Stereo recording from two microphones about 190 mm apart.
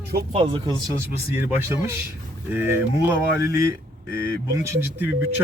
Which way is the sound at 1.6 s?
15° right (ahead or behind).